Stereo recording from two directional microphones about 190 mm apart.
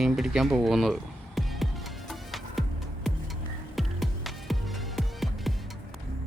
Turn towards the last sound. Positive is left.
turn(degrees=0)  # may be behind; listen again after turning